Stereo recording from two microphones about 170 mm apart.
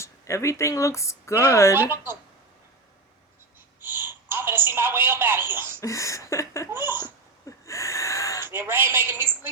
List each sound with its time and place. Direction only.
0.0 s speech: 15° left (ahead or behind)
3.8 s a woman's voice: 10° right (ahead or behind)
5.8 s a sound: 20° left (ahead or behind)
6.7 s laughter: 10° right (ahead or behind)
7.4 s gasp: 20° left (ahead or behind)
8.4 s a woman's voice: 15° right (ahead or behind)